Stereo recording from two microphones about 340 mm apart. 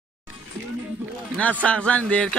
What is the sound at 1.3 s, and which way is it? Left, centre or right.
Speech, centre.